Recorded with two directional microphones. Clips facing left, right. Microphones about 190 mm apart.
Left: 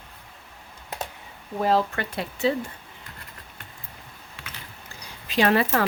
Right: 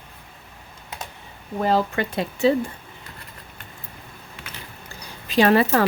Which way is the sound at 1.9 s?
20° right (ahead or behind).